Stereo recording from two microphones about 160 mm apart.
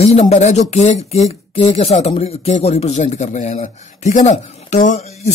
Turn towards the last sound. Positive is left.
turn(degrees=50)  # may be behind; listen again after turning